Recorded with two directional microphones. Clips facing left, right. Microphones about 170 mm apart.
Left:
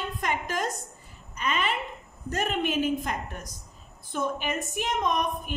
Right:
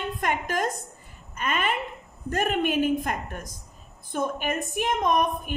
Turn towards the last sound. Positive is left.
turn(degrees=-50)  # may be behind; listen again after turning